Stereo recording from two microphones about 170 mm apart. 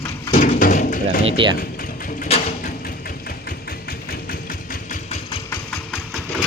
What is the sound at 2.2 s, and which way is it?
Music, 35° left (ahead or behind).